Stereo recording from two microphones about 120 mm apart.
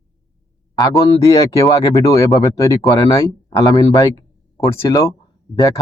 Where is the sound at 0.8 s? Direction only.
30° left (ahead or behind).